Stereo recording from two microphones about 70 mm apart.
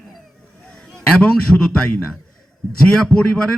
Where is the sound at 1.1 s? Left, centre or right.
Centre.